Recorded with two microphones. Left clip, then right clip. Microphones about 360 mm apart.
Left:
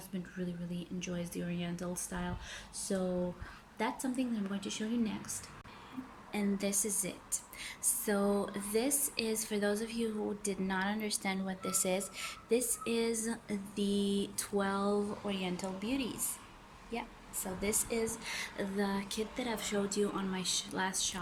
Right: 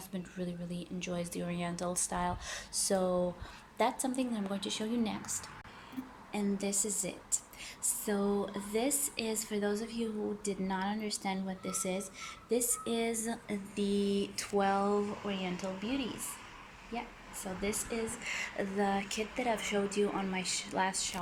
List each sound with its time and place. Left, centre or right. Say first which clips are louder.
0.3 s speech: right 2 dB; centre
6.3 s a woman's voice: even; centre
20.4 s speech: left 1 dB; left
20.7 s a woman's voice: right 2 dB; centre